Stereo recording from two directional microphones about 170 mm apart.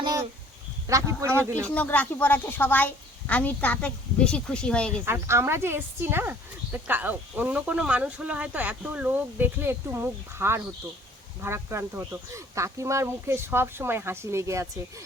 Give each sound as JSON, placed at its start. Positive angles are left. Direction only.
{"t": 0.0, "sound": "a sound", "side_deg": -20}
{"t": 0.9, "sound": "speech", "side_deg": -20}
{"t": 1.6, "sound": "a woman's voice", "side_deg": 5}
{"t": 5.0, "sound": "speech", "side_deg": -15}